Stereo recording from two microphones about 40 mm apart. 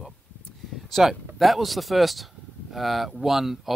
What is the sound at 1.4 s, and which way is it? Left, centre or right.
Speech, centre.